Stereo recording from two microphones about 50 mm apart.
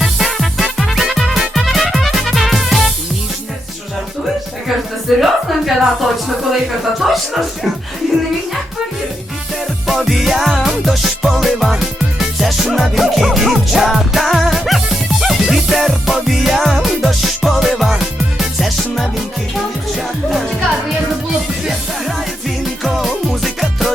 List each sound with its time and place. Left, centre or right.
0.0 s music: centre
5.0 s music: centre
9.8 s music: centre
23.0 s music: centre